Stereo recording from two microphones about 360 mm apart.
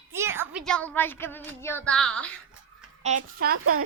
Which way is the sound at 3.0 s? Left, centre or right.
Right.